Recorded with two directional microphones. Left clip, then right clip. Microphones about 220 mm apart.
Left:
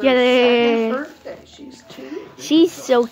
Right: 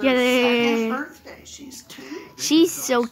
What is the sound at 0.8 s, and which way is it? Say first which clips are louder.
Speech: left 4 dB; 55° right (ahead or behind).